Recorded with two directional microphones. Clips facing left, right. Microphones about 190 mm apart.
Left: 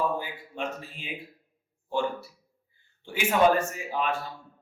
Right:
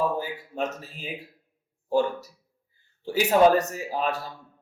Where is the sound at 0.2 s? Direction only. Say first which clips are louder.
Right 5 dB; 40° right (ahead or behind).